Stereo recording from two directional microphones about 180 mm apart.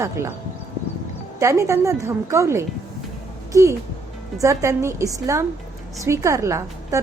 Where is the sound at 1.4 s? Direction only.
15° right (ahead or behind).